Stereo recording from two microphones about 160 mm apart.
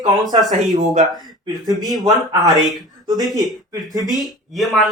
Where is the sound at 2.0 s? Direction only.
20° right (ahead or behind).